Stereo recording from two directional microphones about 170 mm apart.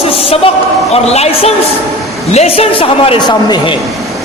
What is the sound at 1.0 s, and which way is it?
Speech, 40° left (ahead or behind).